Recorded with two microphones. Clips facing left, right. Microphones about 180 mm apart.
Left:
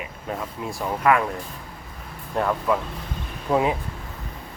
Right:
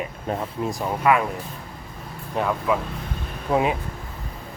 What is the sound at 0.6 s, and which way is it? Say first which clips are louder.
Speech: even; 15° right (ahead or behind).